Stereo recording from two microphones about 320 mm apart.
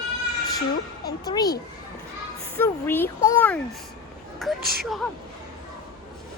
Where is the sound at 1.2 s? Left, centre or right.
Centre.